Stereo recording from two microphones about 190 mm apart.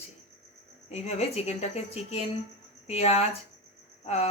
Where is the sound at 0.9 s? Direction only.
35° left (ahead or behind).